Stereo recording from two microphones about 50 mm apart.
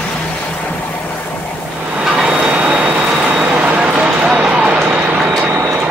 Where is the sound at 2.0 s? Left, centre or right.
Centre.